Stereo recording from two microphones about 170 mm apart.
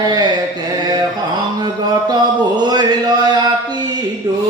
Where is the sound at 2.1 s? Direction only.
25° right (ahead or behind).